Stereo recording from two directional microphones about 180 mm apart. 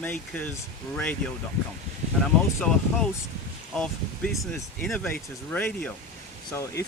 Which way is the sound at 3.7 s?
5° left (ahead or behind).